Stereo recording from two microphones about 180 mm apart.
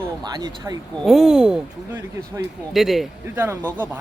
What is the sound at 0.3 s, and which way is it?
Speech, 20° right (ahead or behind).